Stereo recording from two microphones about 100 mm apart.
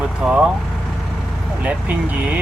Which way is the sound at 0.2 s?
10° right (ahead or behind).